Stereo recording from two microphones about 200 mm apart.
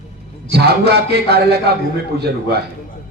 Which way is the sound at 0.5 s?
55° right (ahead or behind).